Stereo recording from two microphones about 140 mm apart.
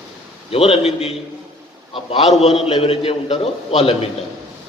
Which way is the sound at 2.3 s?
45° left (ahead or behind).